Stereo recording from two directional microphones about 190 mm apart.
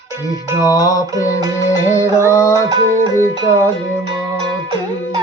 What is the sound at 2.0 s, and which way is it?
Mantra, 15° left (ahead or behind).